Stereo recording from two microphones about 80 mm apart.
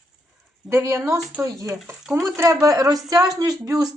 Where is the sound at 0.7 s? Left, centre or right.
Right.